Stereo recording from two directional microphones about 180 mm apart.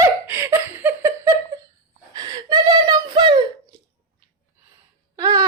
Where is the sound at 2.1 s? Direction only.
25° right (ahead or behind).